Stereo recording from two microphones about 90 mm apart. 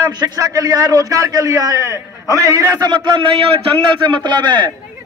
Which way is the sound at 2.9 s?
60° right (ahead or behind).